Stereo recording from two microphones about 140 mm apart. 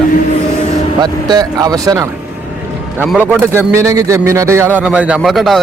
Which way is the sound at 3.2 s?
15° right (ahead or behind).